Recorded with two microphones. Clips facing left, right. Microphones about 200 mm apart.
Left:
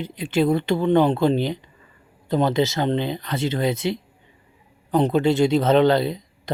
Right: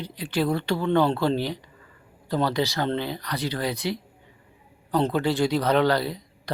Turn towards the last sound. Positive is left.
turn(degrees=20)  # may be behind; listen again after turning